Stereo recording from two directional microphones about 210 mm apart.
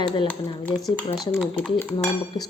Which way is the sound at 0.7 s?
5° left (ahead or behind).